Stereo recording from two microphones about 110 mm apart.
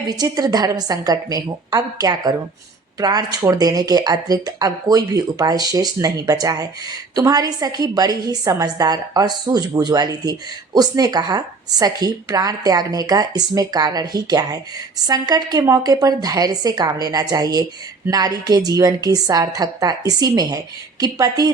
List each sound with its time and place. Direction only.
0.1 s speech: 35° right (ahead or behind)